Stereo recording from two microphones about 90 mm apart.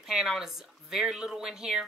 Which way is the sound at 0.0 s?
5° right (ahead or behind).